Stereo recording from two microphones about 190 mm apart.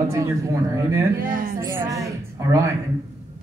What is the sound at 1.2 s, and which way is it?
Speech, 45° right (ahead or behind).